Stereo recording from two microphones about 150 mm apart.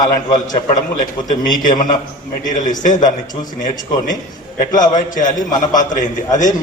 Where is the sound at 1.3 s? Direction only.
65° left (ahead or behind).